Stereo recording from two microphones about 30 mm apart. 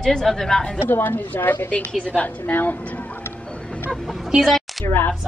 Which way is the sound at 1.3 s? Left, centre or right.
Left.